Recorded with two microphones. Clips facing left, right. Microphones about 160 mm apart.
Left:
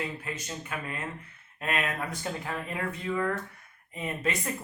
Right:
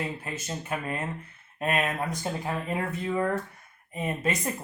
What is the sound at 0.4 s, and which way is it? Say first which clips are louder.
Speech: right 4 dB; 30° right (ahead or behind).